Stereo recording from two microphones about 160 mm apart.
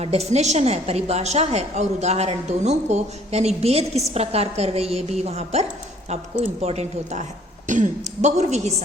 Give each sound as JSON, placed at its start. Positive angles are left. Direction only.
{"t": 0.0, "sound": "a woman's voice", "side_deg": -40}